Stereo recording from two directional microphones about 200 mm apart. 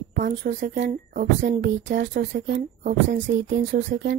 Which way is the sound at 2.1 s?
60° right (ahead or behind).